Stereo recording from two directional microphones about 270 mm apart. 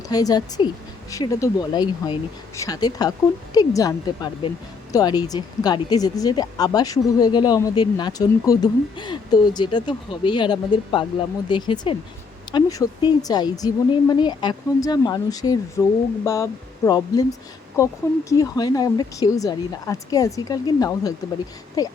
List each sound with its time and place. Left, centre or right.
0.1 s a woman's voice: centre